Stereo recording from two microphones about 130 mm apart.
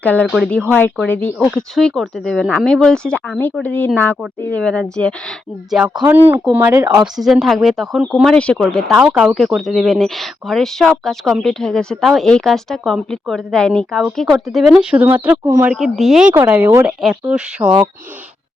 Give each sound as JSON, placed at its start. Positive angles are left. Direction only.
{"t": 0.0, "sound": "speech", "side_deg": 10}
{"t": 1.4, "sound": "speech", "side_deg": 0}
{"t": 6.1, "sound": "speech", "side_deg": -15}
{"t": 7.2, "sound": "speech", "side_deg": 0}
{"t": 9.0, "sound": "speech", "side_deg": -10}
{"t": 15.0, "sound": "speech", "side_deg": -15}
{"t": 15.7, "sound": "speech", "side_deg": 0}
{"t": 16.3, "sound": "speech", "side_deg": -15}
{"t": 17.0, "sound": "speech", "side_deg": -5}